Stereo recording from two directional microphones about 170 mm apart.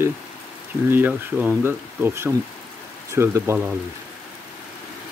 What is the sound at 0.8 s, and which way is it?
Speech, 10° right (ahead or behind).